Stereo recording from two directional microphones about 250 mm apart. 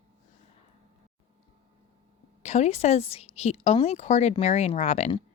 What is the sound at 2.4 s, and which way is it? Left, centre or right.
A woman's voice, left.